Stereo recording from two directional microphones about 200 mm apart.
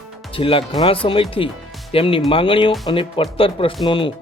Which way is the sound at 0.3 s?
25° left (ahead or behind).